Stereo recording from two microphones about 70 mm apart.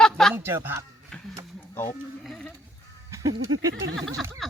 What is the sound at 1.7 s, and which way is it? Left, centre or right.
Speech, left.